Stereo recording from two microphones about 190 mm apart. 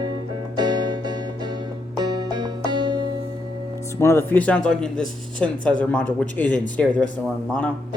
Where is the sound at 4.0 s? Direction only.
15° left (ahead or behind).